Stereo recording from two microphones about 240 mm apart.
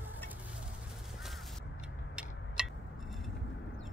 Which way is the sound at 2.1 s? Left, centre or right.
Centre.